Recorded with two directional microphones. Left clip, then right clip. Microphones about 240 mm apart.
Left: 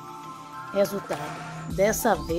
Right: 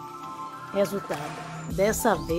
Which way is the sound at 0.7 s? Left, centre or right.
Centre.